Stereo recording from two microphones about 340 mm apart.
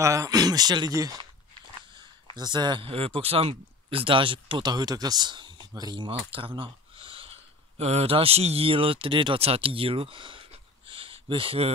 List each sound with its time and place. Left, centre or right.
0.0 s speech: centre
2.3 s speech: centre